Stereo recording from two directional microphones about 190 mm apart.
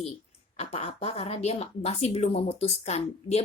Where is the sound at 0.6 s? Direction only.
30° left (ahead or behind).